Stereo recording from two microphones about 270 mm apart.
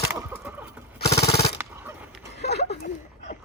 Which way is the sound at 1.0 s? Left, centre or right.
Left.